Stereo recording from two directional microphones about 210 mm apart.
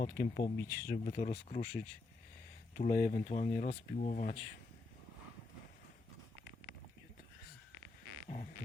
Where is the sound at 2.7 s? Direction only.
35° left (ahead or behind).